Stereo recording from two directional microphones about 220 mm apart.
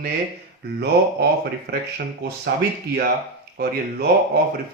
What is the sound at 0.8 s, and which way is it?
Speech, 45° right (ahead or behind).